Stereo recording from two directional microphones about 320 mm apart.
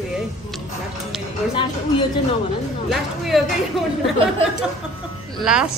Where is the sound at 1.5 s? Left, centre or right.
Centre.